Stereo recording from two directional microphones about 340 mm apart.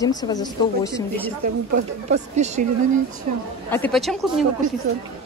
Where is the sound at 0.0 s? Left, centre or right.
Centre.